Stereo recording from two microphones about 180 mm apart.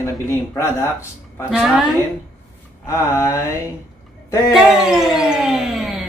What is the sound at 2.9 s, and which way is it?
Speech, 15° left (ahead or behind).